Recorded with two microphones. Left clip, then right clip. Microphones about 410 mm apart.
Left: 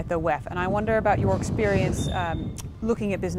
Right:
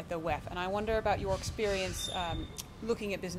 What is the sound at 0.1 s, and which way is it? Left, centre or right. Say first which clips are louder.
Speech: left 10 dB; left.